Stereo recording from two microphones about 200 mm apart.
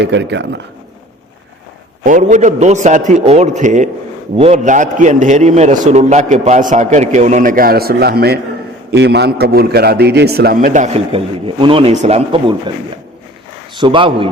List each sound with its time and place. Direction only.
0.0 s speech: 60° right (ahead or behind)
2.0 s a man's voice: 40° right (ahead or behind)
13.7 s speech: 25° right (ahead or behind)